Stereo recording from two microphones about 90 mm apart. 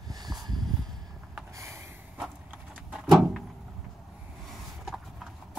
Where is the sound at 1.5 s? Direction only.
35° right (ahead or behind).